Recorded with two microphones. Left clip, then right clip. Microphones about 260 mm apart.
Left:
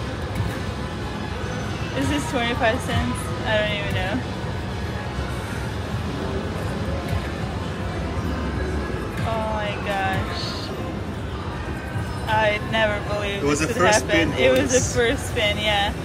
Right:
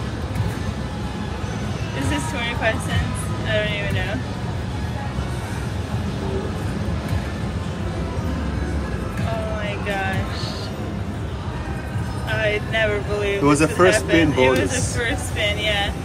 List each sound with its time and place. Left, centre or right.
2.3 s speech: centre
9.8 s a sound: centre
12.3 s vehicle: centre
13.5 s speech: centre
14.0 s speech: centre